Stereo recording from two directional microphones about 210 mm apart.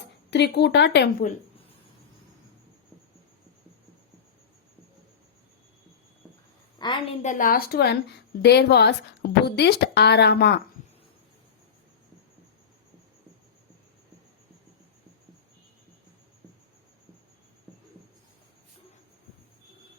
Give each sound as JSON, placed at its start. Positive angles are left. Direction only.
{"t": 0.3, "sound": "a woman's voice", "side_deg": 55}
{"t": 6.7, "sound": "a woman's voice", "side_deg": 20}
{"t": 7.2, "sound": "a woman's voice", "side_deg": 35}